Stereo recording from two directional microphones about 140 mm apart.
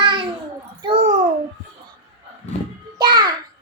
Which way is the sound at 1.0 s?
55° right (ahead or behind).